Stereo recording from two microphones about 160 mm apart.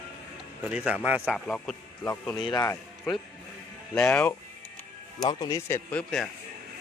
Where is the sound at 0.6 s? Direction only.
10° right (ahead or behind).